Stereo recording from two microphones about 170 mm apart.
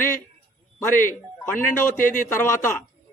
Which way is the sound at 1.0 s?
15° left (ahead or behind).